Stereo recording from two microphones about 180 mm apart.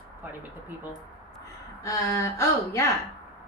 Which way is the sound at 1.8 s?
20° left (ahead or behind).